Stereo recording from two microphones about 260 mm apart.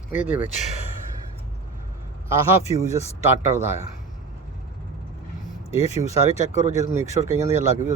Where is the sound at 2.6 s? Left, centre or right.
Left.